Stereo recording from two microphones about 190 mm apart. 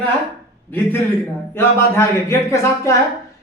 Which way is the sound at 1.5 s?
15° left (ahead or behind).